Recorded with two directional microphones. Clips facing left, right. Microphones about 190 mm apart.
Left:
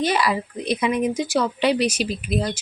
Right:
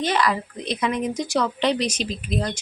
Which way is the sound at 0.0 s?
10° left (ahead or behind).